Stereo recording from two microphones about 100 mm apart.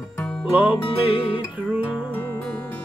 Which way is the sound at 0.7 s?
60° left (ahead or behind).